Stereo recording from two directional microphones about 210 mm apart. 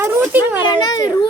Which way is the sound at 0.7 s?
20° left (ahead or behind).